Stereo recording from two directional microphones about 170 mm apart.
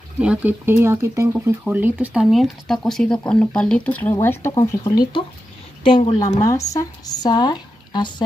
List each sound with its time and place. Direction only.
0.2 s speech: 10° right (ahead or behind); by 4.9 s 20° left (ahead or behind)
5.9 s a woman's voice: 30° left (ahead or behind)